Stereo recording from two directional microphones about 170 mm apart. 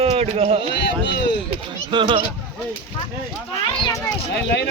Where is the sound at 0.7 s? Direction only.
90° left.